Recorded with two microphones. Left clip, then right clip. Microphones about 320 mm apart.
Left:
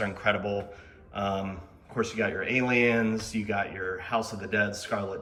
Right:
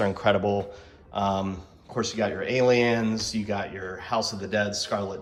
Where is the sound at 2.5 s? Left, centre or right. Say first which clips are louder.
Right 4 dB; centre.